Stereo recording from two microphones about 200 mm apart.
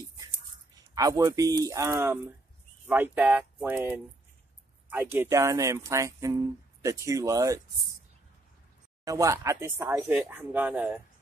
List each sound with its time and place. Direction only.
0.9 s speech: 15° right (ahead or behind)
9.0 s speech: 15° right (ahead or behind)